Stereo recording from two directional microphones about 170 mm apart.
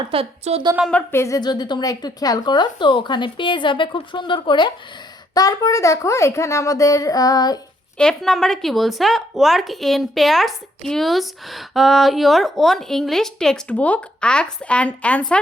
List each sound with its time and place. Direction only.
0.1 s a woman's voice: 35° right (ahead or behind)
0.9 s a woman's voice: 10° left (ahead or behind)
7.9 s speech: 5° left (ahead or behind)